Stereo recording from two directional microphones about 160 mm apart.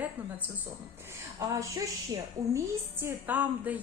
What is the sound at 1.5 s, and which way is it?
A woman's voice, 20° right (ahead or behind).